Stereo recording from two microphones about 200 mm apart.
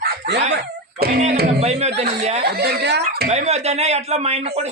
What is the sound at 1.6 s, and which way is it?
Speech, 35° right (ahead or behind).